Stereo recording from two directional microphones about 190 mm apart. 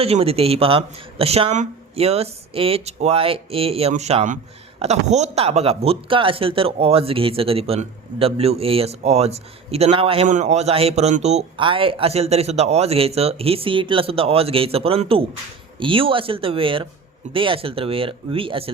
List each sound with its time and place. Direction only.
0.0 s speech: 30° right (ahead or behind)